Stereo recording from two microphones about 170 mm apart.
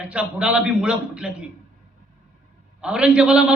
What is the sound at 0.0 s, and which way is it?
A man's voice, 5° right (ahead or behind).